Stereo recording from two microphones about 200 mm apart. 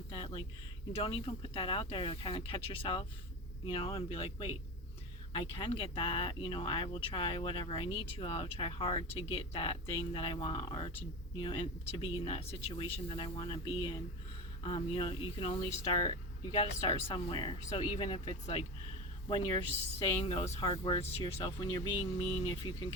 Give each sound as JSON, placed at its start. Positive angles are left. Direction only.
{"t": 0.1, "sound": "speech", "side_deg": 25}
{"t": 20.0, "sound": "speech", "side_deg": 30}